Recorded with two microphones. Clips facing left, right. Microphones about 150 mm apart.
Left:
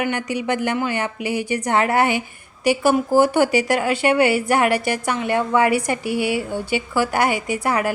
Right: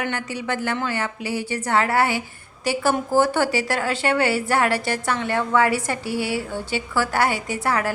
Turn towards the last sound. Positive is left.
turn(degrees=15)  # may be behind; listen again after turning